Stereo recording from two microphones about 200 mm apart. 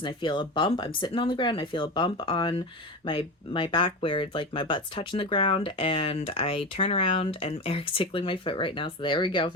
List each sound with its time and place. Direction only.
0.0 s speech: 25° left (ahead or behind)